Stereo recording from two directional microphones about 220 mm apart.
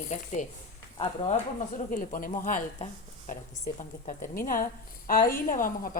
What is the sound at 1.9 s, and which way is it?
Speech, 40° left (ahead or behind).